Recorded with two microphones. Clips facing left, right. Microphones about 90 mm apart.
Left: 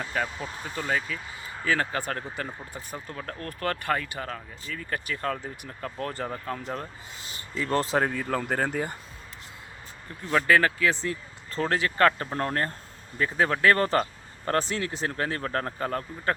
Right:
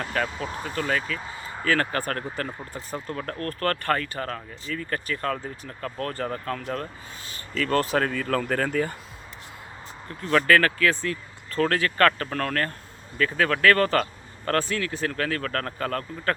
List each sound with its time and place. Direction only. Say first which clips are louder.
0.0 s speech: right 3 dB; 10° left (ahead or behind)
8.0 s speech: right 1 dB; 90° right
8.3 s speech: right 2 dB; 15° left (ahead or behind)
10.2 s speech: right 2 dB; 15° left (ahead or behind)